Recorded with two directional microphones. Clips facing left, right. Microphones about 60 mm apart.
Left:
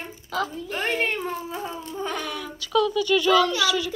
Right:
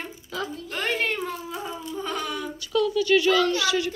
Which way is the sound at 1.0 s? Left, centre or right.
Left.